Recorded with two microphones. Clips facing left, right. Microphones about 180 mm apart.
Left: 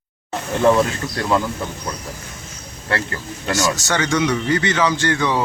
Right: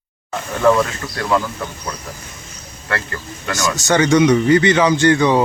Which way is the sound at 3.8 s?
20° right (ahead or behind).